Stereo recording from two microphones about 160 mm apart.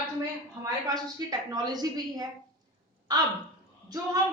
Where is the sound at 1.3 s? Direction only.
25° right (ahead or behind).